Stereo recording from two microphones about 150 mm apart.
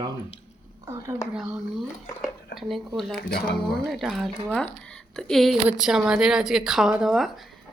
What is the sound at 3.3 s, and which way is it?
Speech, 90° left.